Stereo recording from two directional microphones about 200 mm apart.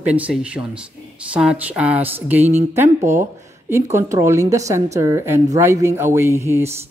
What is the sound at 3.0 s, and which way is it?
Speech, 40° right (ahead or behind).